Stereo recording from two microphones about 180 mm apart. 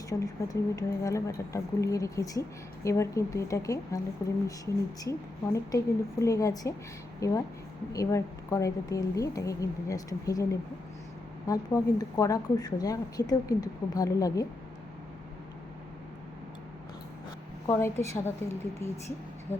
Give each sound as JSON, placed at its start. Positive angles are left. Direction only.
{"t": 0.1, "sound": "a woman's voice", "side_deg": 20}
{"t": 17.7, "sound": "a woman's voice", "side_deg": 15}